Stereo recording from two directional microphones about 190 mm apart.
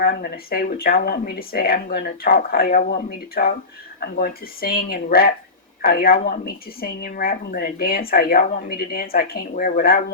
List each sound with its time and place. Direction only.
0.0 s a woman's voice: 50° left (ahead or behind)